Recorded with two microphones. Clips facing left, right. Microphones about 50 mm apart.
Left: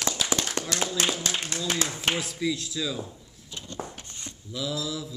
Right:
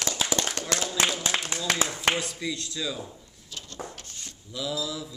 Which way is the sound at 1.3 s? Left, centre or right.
Right.